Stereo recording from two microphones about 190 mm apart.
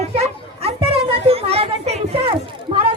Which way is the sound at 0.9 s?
30° right (ahead or behind).